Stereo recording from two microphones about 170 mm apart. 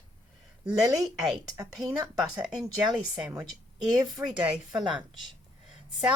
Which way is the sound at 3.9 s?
25° right (ahead or behind).